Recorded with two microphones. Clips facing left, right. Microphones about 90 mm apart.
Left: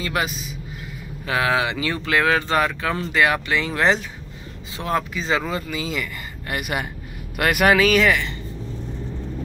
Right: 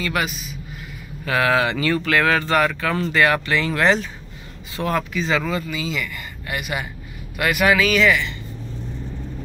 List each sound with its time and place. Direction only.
0.0 s speech: 30° left (ahead or behind)
1.2 s speech: 20° left (ahead or behind); by 8.4 s 40° left (ahead or behind)